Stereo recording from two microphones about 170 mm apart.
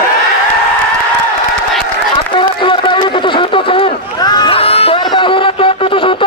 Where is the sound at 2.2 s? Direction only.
30° left (ahead or behind).